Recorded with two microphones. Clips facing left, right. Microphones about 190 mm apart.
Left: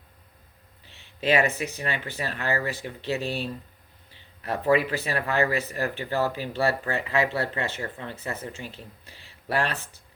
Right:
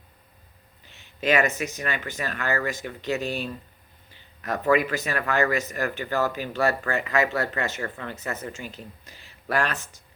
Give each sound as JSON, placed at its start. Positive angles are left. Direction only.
{"t": 0.9, "sound": "speech", "side_deg": 35}